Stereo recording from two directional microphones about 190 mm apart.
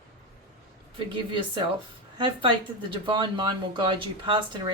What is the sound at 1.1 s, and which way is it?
Speech, 25° right (ahead or behind).